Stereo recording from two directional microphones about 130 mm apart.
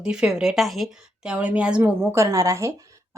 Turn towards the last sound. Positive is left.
turn(degrees=-25)  # may be behind; listen again after turning